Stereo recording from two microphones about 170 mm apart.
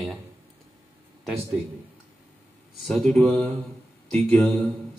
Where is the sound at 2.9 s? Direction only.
5° left (ahead or behind).